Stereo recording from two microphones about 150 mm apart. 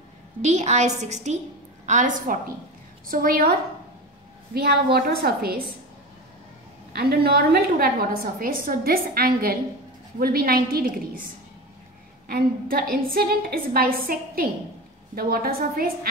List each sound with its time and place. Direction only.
0.4 s a woman's voice: 50° right (ahead or behind)
3.1 s a woman's voice: 75° right (ahead or behind)
4.9 s a woman's voice: 90° right
6.9 s a woman's voice: 90° right
12.3 s a woman's voice: 85° right